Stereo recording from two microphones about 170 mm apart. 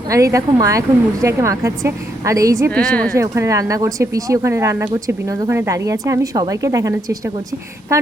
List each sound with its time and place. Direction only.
0.1 s speech: 20° right (ahead or behind)
2.7 s a woman's voice: 5° left (ahead or behind)
3.2 s speech: 20° right (ahead or behind)